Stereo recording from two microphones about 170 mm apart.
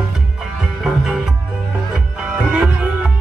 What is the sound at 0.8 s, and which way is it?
Music, 5° right (ahead or behind).